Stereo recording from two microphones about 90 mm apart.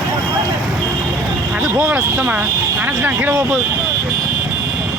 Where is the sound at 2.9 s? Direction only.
20° right (ahead or behind).